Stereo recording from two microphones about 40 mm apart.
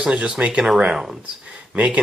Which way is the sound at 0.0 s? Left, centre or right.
Right.